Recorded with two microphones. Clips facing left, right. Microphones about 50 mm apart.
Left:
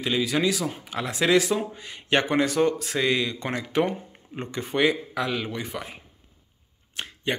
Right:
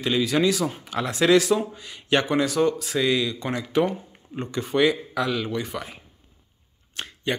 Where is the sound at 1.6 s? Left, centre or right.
Left.